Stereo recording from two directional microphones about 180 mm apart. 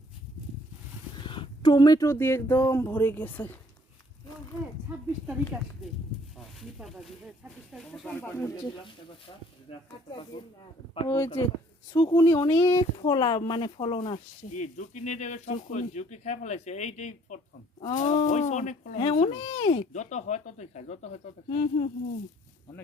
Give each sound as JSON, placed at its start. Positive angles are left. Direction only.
{"t": 1.2, "sound": "speech", "side_deg": 25}
{"t": 4.9, "sound": "speech", "side_deg": -5}
{"t": 6.6, "sound": "speech", "side_deg": 0}
{"t": 8.2, "sound": "speech", "side_deg": 15}
{"t": 10.3, "sound": "speech", "side_deg": 25}
{"t": 14.5, "sound": "speech", "side_deg": 45}